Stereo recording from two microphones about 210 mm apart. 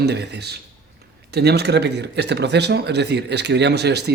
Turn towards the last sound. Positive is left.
turn(degrees=-50)  # may be behind; listen again after turning